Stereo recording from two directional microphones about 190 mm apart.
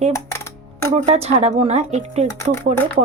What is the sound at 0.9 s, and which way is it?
Speech, 35° right (ahead or behind).